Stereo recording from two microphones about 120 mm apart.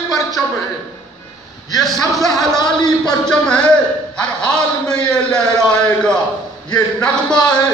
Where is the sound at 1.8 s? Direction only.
Centre (ahead or behind).